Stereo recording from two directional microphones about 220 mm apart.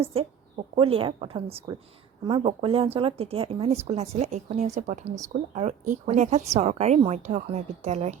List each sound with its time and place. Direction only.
0.0 s speech: 25° right (ahead or behind)